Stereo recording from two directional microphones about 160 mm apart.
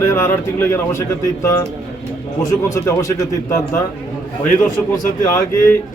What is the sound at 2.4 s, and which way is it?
Speech, 20° left (ahead or behind).